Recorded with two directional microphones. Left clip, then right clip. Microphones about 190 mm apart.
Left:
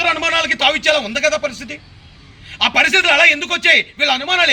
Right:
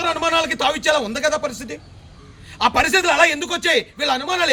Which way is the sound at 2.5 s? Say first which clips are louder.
Left 3 dB; 10° right (ahead or behind).